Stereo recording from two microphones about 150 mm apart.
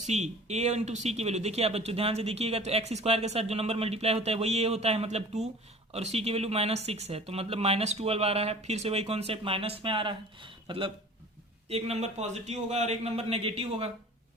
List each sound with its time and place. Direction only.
0.0 s speech: 50° right (ahead or behind)